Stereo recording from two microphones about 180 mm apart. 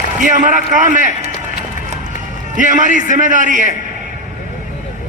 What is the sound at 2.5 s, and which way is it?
A man's voice, 45° right (ahead or behind).